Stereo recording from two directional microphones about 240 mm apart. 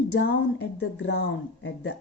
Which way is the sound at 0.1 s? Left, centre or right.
Left.